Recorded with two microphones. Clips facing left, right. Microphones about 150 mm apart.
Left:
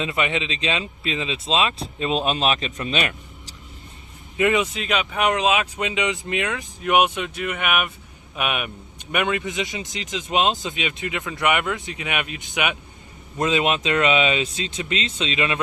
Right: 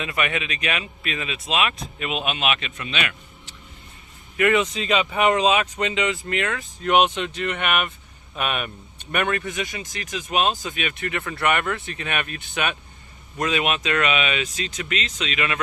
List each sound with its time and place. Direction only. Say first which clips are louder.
0.0 s speech: left 2 dB; 20° left (ahead or behind)
4.4 s speech: even; 15° left (ahead or behind)
4.7 s speech: right 2 dB; centre (ahead or behind); by 15.5 s 25° left (ahead or behind)